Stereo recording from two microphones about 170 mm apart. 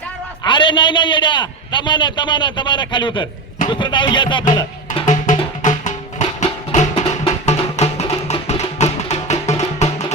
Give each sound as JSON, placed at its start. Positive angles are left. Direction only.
{"t": 0.4, "sound": "a man's voice", "side_deg": 30}
{"t": 4.9, "sound": "music", "side_deg": 45}